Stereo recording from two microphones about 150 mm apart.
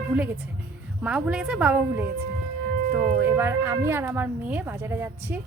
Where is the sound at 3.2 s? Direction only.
15° right (ahead or behind).